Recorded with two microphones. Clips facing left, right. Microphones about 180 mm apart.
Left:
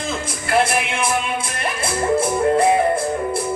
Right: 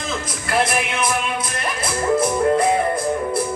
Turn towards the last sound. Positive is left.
turn(degrees=30)  # may be behind; listen again after turning